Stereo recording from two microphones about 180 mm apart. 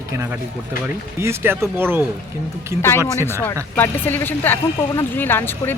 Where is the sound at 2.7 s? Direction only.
40° left (ahead or behind).